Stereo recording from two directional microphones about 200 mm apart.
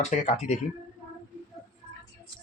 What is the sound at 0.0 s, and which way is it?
Speech, 35° left (ahead or behind).